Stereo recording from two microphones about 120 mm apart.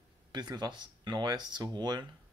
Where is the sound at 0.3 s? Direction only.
35° right (ahead or behind).